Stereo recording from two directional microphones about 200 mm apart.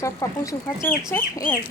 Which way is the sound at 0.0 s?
15° left (ahead or behind).